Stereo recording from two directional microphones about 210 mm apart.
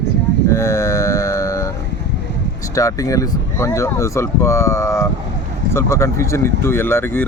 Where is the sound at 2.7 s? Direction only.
15° left (ahead or behind).